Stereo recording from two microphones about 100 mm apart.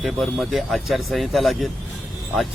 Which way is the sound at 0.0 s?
Centre (ahead or behind).